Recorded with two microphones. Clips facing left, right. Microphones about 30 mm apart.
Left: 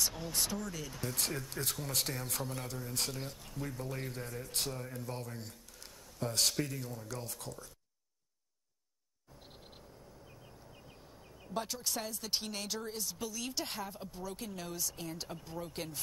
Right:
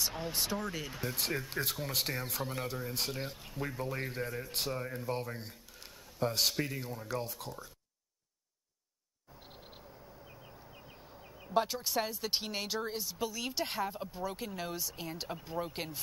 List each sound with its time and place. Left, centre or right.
0.1 s a man's voice: right
6.1 s a man's voice: centre
6.6 s a man's voice: right
9.5 s a sound: centre
12.0 s speech: right